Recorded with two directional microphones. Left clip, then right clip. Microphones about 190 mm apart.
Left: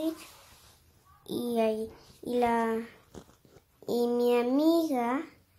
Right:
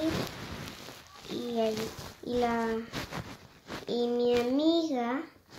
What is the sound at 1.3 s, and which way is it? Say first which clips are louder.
Speech: left 2 dB; 25° left (ahead or behind).